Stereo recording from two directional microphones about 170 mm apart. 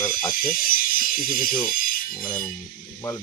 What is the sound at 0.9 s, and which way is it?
Speech, 55° left (ahead or behind).